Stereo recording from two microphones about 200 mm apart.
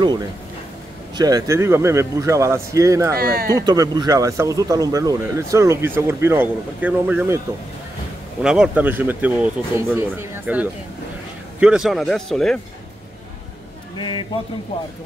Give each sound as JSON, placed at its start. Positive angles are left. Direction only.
{"t": 1.1, "sound": "speech", "side_deg": -20}
{"t": 3.2, "sound": "speech", "side_deg": -50}
{"t": 3.5, "sound": "a man's voice", "side_deg": -20}
{"t": 13.9, "sound": "a man's voice", "side_deg": 25}